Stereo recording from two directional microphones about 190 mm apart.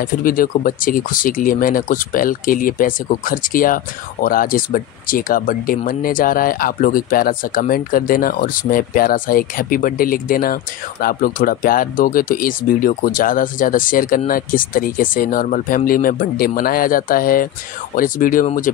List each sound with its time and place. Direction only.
0.0 s speech: 50° left (ahead or behind)